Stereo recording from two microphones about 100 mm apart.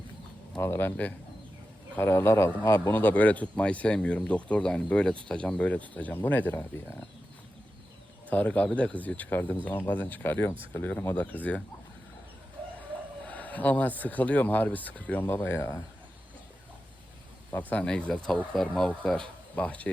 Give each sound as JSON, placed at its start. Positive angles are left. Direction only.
{"t": 0.6, "sound": "speech", "side_deg": 25}
{"t": 2.9, "sound": "speech", "side_deg": 15}
{"t": 8.3, "sound": "speech", "side_deg": 15}
{"t": 11.3, "sound": "speech", "side_deg": -20}
{"t": 13.2, "sound": "speech", "side_deg": 15}
{"t": 17.5, "sound": "speech", "side_deg": 15}